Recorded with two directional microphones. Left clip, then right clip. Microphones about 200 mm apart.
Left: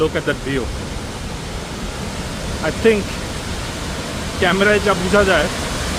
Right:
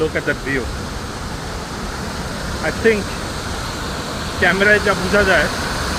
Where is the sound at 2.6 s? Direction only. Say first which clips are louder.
Left 1 dB; 30° left (ahead or behind).